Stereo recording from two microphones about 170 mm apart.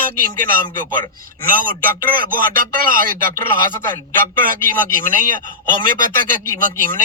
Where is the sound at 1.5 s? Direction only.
55° right (ahead or behind).